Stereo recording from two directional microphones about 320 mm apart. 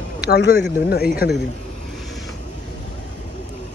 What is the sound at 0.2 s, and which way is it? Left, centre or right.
Speech, left.